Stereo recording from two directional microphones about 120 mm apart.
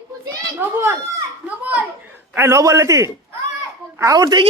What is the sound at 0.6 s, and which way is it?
Speech, 20° right (ahead or behind).